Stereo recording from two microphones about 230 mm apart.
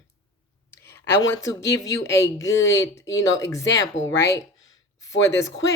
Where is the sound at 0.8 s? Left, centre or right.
Centre.